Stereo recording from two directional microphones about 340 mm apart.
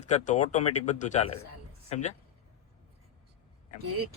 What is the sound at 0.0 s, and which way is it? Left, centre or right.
Speech, left.